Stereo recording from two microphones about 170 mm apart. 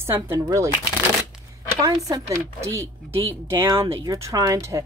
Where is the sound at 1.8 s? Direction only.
20° right (ahead or behind).